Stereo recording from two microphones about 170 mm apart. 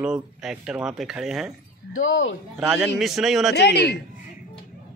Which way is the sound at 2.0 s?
90° left.